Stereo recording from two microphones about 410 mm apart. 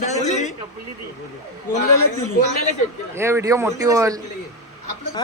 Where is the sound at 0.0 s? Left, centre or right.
Centre.